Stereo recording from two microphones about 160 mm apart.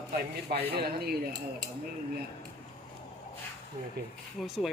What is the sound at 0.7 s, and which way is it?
Speech, 75° right (ahead or behind).